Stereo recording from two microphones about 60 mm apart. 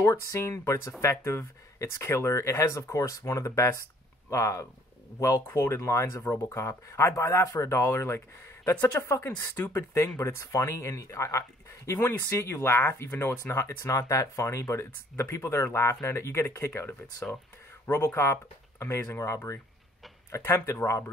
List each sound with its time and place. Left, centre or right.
0.0 s speech: left
13.7 s speech: left
14.4 s speech: left